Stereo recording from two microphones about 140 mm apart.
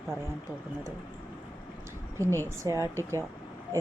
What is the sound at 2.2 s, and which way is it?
A woman's voice, 20° right (ahead or behind).